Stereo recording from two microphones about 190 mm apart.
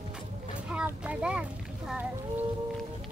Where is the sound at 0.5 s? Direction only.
5° right (ahead or behind).